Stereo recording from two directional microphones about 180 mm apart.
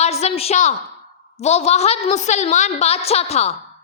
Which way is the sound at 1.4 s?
35° left (ahead or behind).